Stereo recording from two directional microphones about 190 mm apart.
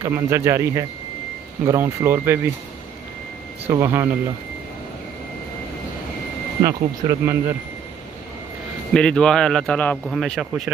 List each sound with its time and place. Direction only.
0.0 s speech: 15° right (ahead or behind)
3.6 s speech: 15° right (ahead or behind)
6.6 s speech: 15° right (ahead or behind)
8.9 s speech: 5° left (ahead or behind)